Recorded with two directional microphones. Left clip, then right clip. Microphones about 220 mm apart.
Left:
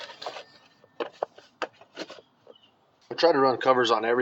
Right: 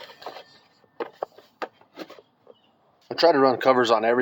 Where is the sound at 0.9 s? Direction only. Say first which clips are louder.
Even; centre (ahead or behind).